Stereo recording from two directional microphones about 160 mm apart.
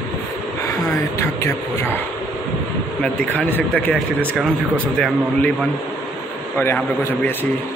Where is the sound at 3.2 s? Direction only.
10° left (ahead or behind).